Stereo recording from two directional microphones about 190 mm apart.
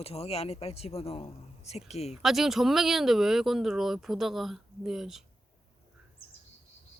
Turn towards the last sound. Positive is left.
turn(degrees=0)  # may be behind; listen again after turning